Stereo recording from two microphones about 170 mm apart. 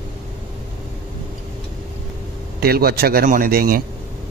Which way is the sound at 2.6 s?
65° right (ahead or behind).